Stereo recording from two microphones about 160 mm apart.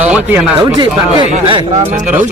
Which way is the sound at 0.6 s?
30° right (ahead or behind).